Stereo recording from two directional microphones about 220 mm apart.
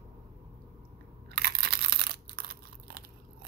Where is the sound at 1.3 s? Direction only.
45° right (ahead or behind).